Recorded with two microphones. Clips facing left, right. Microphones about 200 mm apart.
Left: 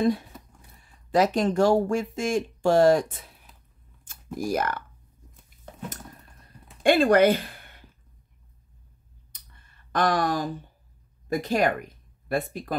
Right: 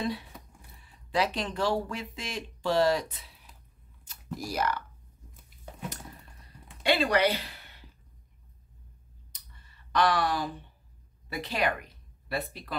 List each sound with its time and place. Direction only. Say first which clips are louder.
0.7 s speech: left 7 dB; 45° left (ahead or behind)
6.8 s speech: left 7 dB; 50° left (ahead or behind)
9.3 s clicking: left 2 dB; 55° left (ahead or behind)
11.2 s speech: left 7 dB; 45° left (ahead or behind)